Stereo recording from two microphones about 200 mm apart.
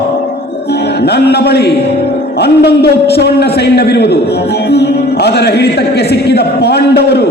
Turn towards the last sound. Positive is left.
turn(degrees=55)  # may be behind; listen again after turning